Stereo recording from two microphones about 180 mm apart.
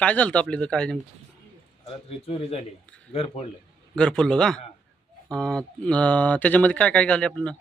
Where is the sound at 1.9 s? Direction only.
35° left (ahead or behind).